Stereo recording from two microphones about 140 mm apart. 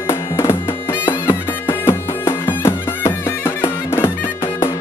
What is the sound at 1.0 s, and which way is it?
Music, 15° left (ahead or behind).